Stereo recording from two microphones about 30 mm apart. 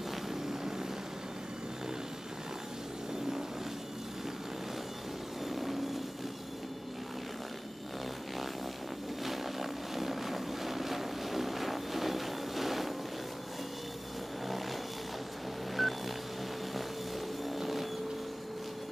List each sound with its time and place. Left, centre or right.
0.3 s vehicle: centre
5.5 s vehicle: centre
9.2 s vehicle: centre
15.8 s vehicle: centre
17.5 s vehicle: centre